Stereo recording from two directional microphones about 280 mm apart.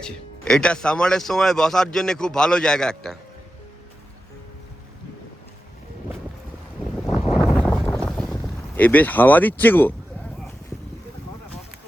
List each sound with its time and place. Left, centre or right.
0.0 s speech: centre
7.0 s boat: centre
7.3 s wind noise: centre
7.7 s boat: centre